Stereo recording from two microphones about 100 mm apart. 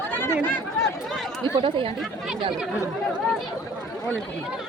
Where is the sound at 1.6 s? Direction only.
55° right (ahead or behind).